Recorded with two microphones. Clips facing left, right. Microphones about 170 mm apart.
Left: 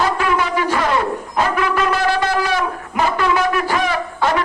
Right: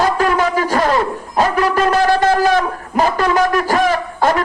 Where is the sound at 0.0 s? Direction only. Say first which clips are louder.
Right 3 dB; 40° right (ahead or behind).